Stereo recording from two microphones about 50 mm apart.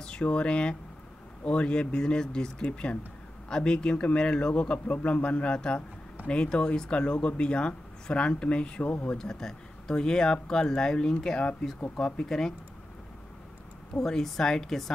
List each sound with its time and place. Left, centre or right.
0.0 s speech: left
8.8 s speech: left
9.1 s speech: centre
13.9 s speech: centre